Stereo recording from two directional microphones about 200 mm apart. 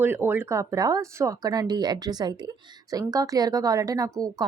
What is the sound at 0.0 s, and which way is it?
A woman's voice, 10° right (ahead or behind).